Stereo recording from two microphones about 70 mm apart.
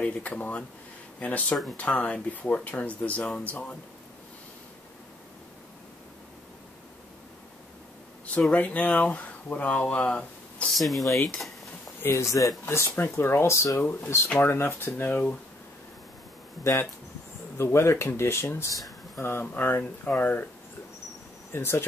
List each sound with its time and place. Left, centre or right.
0.0 s speech: left
8.4 s speech: centre
10.7 s speech: centre
12.0 s speech: left
12.3 s speech: left
12.6 s speech: left
14.4 s speech: left
17.6 s speech: left
21.5 s speech: left